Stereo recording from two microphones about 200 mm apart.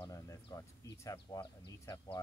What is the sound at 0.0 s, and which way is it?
Speech, 20° left (ahead or behind).